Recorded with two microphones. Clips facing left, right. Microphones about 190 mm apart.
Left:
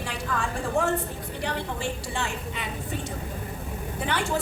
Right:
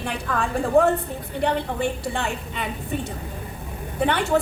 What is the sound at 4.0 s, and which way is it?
Speech, 60° right (ahead or behind).